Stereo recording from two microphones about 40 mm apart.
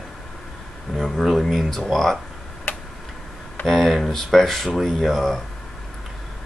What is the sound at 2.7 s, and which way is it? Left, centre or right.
Tick-tock, left.